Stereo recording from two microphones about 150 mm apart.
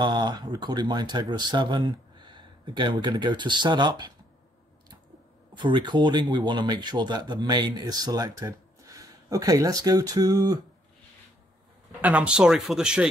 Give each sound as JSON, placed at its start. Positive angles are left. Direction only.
{"t": 0.0, "sound": "speech", "side_deg": -30}
{"t": 5.5, "sound": "speech", "side_deg": -30}
{"t": 12.0, "sound": "speech", "side_deg": -10}